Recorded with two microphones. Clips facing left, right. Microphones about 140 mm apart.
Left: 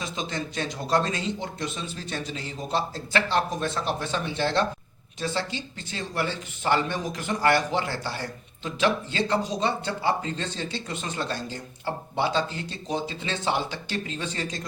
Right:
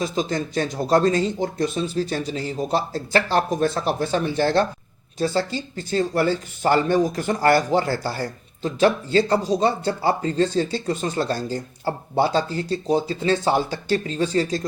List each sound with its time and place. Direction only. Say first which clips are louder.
0.0 s speech: right 8 dB; 40° right (ahead or behind)